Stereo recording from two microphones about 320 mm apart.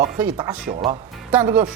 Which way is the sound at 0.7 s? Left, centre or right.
Centre.